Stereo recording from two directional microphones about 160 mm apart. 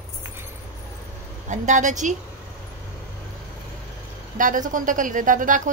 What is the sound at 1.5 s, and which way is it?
Speech, 50° right (ahead or behind).